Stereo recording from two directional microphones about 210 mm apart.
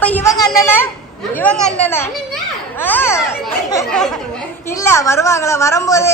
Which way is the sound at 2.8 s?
10° left (ahead or behind).